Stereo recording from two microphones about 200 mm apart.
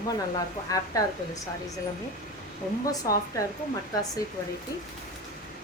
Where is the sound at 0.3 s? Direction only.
15° left (ahead or behind).